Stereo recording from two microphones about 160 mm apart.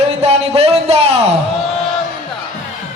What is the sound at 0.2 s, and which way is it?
Speech, 40° right (ahead or behind).